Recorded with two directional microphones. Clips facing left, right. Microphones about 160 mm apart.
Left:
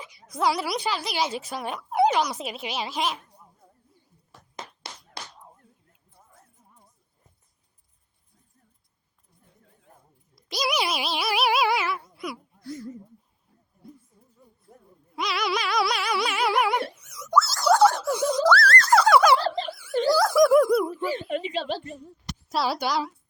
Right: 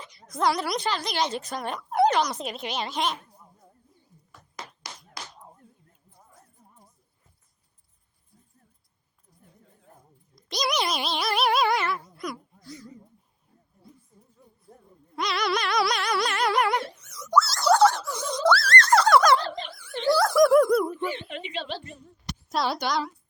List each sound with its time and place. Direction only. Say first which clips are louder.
0.0 s a woman's voice: even; 5° left (ahead or behind)
4.3 s a sound: left 1 dB; 30° left (ahead or behind)
10.3 s speech: even; 5° left (ahead or behind)
14.4 s a sound: left 1 dB; centre (ahead or behind)
15.1 s a woman's voice: right 1 dB; 5° left (ahead or behind)
18.2 s a sound: left 2 dB; 5° left (ahead or behind)
20.1 s a woman's voice: even; centre (ahead or behind)
21.0 s speech: left 4 dB; 40° left (ahead or behind)
22.4 s a woman's voice: left 1 dB; 5° left (ahead or behind)